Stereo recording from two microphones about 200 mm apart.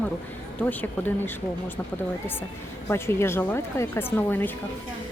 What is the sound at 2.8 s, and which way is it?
Speech, 10° left (ahead or behind).